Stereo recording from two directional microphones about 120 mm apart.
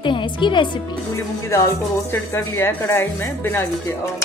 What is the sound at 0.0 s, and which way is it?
Speech, 40° left (ahead or behind).